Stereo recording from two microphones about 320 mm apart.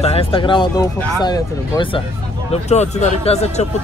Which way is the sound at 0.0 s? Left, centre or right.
Centre.